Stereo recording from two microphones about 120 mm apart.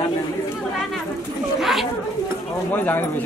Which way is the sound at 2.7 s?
15° left (ahead or behind).